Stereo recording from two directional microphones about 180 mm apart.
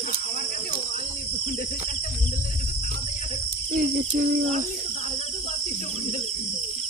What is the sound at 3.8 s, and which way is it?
Cricket, 40° right (ahead or behind).